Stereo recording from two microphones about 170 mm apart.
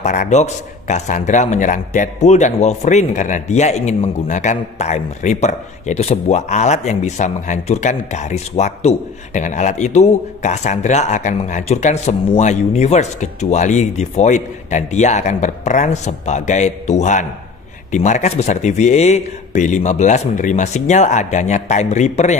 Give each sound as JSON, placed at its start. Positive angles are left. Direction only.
{"t": 0.0, "sound": "a man's voice", "side_deg": 45}